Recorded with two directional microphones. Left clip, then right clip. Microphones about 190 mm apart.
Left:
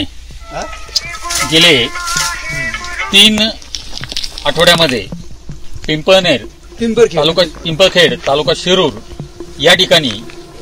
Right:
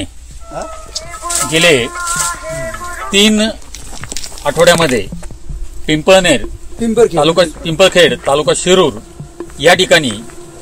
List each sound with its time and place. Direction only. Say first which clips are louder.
1.5 s speech: left 2 dB; 5° right (ahead or behind)
1.9 s music: left 1 dB; 20° right (ahead or behind)
4.4 s speech: even; 5° right (ahead or behind)
6.8 s a man's voice: even; 45° right (ahead or behind)
7.2 s speech: right 1 dB; 10° right (ahead or behind)